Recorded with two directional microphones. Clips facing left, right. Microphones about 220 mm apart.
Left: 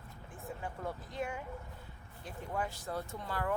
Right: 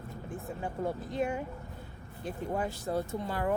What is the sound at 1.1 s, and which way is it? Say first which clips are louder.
Speech: right 7 dB; 25° right (ahead or behind).